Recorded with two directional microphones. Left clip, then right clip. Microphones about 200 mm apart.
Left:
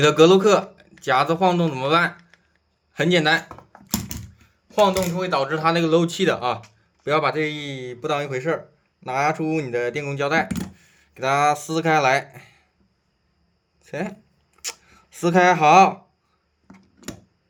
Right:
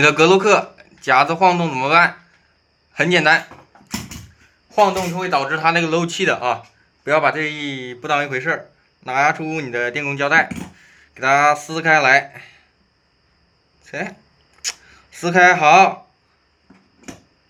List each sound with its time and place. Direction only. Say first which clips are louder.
0.0 s speech: right 2 dB; 30° left (ahead or behind)
4.7 s speech: right 3 dB; 35° left (ahead or behind)
13.8 s speech: right 3 dB; 40° left (ahead or behind)